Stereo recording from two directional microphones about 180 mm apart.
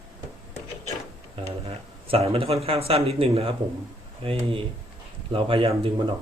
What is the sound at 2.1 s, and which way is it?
Speech, 30° right (ahead or behind).